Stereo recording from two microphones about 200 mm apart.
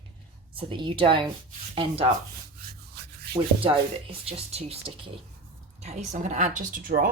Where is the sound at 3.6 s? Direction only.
30° right (ahead or behind).